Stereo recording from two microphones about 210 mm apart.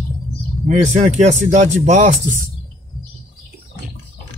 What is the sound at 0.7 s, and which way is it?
Speech, 35° right (ahead or behind).